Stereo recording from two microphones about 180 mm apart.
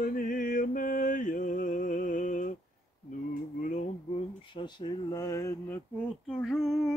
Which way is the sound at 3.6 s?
40° left (ahead or behind).